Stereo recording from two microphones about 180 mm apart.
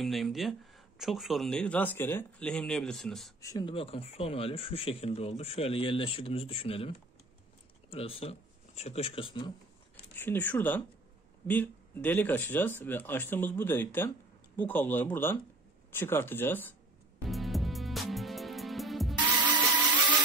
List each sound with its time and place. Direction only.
0.0 s speech: centre (ahead or behind)
3.3 s speech: 20° left (ahead or behind)
7.9 s speech: 35° left (ahead or behind)
10.1 s speech: 10° left (ahead or behind)
17.3 s music: centre (ahead or behind)
19.1 s music: 25° right (ahead or behind)